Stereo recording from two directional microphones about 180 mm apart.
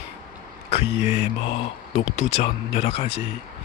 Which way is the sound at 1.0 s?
35° left (ahead or behind).